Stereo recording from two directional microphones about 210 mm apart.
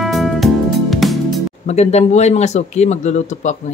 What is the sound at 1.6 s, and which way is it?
Speech, 30° left (ahead or behind).